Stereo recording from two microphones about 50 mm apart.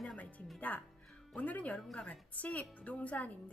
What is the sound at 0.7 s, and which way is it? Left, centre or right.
A woman's voice, left.